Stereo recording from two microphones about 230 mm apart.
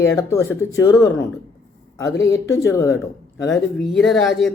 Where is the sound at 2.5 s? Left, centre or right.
Centre.